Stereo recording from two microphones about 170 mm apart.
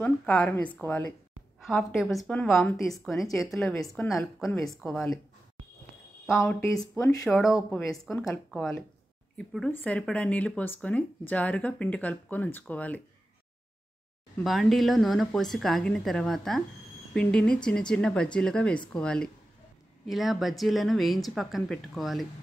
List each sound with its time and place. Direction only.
0.0 s a woman's voice: 5° left (ahead or behind)
6.4 s speech: 15° left (ahead or behind)
7.2 s a woman's voice: 5° left (ahead or behind)
14.4 s a woman's voice: centre (ahead or behind)